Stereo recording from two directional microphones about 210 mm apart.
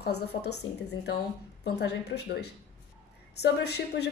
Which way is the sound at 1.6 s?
50° left (ahead or behind).